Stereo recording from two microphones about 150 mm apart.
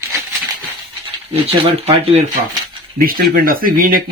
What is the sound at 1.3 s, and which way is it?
Speech, 40° right (ahead or behind).